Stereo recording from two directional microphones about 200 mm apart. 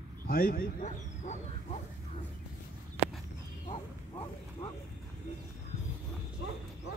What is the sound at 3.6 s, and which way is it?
Bow-wow, 25° left (ahead or behind).